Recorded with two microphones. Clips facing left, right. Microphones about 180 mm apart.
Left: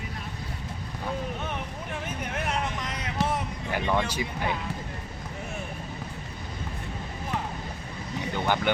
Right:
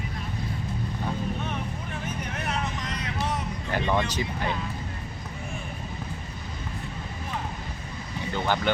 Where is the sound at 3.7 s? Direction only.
10° left (ahead or behind).